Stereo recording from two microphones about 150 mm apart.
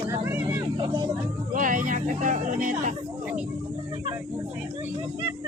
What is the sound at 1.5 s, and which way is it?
Speech, 65° right (ahead or behind).